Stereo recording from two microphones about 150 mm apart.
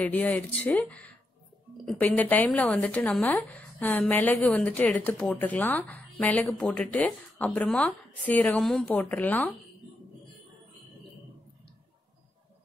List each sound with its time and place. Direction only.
0.0 s speech: 10° left (ahead or behind)